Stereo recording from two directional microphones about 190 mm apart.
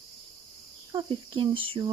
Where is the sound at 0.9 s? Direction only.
25° right (ahead or behind).